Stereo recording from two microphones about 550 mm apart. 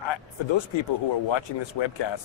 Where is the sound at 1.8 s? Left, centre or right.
Left.